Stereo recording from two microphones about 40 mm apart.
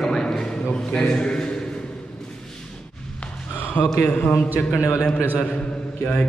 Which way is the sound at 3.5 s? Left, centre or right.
Left.